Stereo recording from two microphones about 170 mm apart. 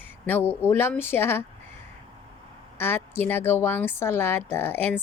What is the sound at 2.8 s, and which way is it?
A woman's voice, 15° left (ahead or behind).